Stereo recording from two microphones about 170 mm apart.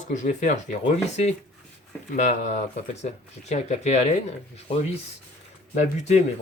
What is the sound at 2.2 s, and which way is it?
Speech, 45° left (ahead or behind).